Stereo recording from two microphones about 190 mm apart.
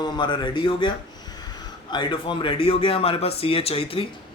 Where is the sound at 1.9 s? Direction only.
25° left (ahead or behind).